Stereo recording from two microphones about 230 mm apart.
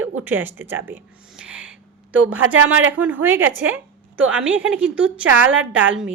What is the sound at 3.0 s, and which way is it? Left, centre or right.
A woman's voice, centre.